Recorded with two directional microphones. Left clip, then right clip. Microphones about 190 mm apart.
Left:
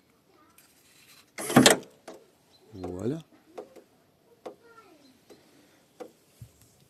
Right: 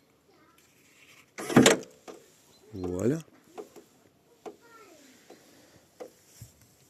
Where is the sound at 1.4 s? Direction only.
50° left (ahead or behind).